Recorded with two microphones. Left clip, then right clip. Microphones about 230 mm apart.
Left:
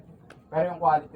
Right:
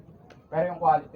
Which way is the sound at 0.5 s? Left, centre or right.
Centre.